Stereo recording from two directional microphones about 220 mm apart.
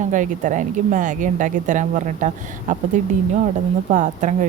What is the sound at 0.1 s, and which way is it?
Speech, 35° right (ahead or behind).